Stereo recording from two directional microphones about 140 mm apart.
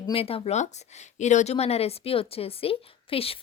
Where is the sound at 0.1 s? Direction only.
40° left (ahead or behind).